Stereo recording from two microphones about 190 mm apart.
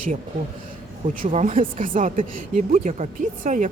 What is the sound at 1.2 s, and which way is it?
A woman's voice, 45° right (ahead or behind).